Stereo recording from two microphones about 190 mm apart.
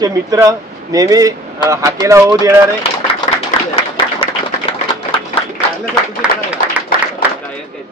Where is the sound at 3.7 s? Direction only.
30° left (ahead or behind).